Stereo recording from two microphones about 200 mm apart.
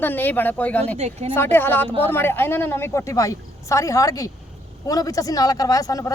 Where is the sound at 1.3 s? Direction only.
10° left (ahead or behind).